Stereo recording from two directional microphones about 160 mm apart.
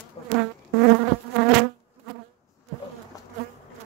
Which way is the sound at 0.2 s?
35° left (ahead or behind).